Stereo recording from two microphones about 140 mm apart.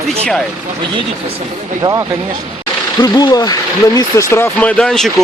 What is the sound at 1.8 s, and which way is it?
Speech, 25° right (ahead or behind).